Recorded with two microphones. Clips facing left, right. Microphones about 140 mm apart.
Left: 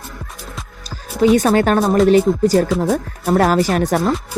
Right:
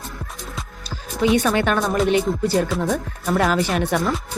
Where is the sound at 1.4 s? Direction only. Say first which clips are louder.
Left 5 dB; 40° left (ahead or behind).